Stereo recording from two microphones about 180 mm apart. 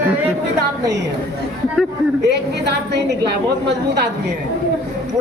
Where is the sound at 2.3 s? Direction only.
70° right (ahead or behind).